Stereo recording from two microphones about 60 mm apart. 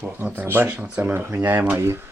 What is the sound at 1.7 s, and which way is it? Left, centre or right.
Speech, right.